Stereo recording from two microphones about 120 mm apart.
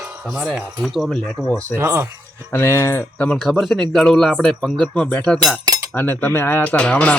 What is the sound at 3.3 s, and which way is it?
A man's voice, centre (ahead or behind).